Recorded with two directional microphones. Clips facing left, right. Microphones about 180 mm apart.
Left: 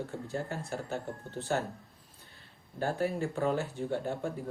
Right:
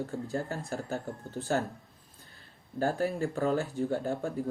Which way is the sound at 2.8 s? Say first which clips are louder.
Right 2 dB; 40° right (ahead or behind).